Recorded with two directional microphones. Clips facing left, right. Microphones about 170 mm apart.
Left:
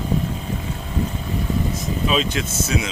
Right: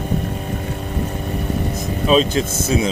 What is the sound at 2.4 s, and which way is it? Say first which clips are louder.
Speech: right 3 dB; 55° right (ahead or behind).